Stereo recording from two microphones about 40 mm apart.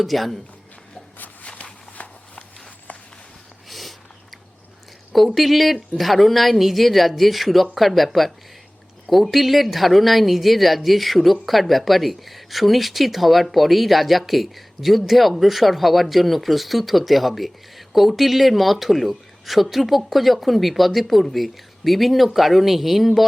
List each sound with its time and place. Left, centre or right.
0.0 s speech: centre
1.5 s walk: left
3.7 s a sound: centre
5.1 s speech: centre